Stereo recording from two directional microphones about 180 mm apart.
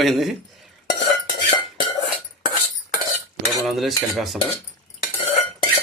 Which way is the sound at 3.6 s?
Centre (ahead or behind).